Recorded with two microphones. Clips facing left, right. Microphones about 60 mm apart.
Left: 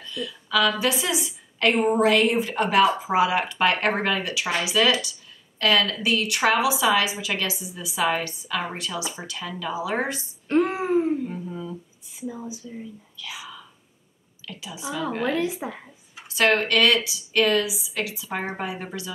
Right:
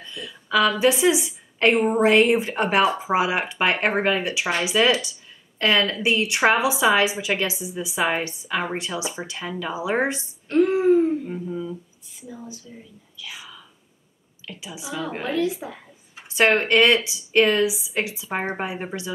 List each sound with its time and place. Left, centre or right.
0.0 s a woman's voice: right
10.5 s a sound: left
11.2 s humming: centre
12.2 s speech: centre
14.4 s a woman's voice: centre
15.3 s a woman's voice: left
16.2 s a woman's voice: right